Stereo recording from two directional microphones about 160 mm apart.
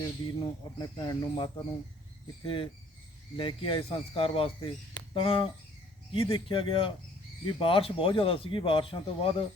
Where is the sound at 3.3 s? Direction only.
30° left (ahead or behind).